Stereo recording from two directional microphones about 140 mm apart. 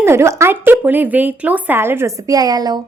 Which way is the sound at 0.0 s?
20° right (ahead or behind).